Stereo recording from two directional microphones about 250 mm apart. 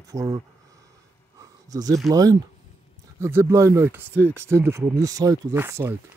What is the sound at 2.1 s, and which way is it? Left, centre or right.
Speech, centre.